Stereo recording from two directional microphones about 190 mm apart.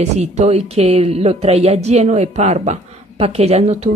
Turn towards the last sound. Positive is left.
turn(degrees=-35)  # may be behind; listen again after turning